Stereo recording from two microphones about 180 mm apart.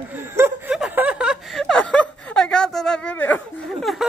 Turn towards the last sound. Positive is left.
turn(degrees=0)  # may be behind; listen again after turning